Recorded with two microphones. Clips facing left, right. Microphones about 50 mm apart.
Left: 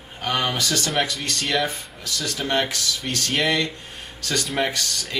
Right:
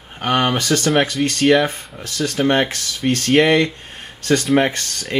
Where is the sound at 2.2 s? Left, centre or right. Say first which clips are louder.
Right 9 dB; centre.